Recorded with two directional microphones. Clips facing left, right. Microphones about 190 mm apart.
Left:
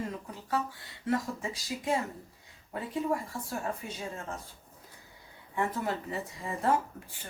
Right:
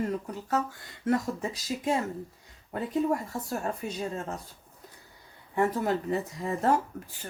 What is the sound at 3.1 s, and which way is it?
Speech, 40° right (ahead or behind).